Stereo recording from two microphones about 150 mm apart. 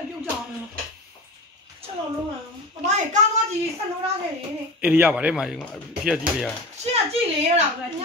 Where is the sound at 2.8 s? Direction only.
50° right (ahead or behind).